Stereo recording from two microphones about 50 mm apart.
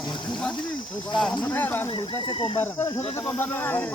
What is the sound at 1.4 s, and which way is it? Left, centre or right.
Speech, left.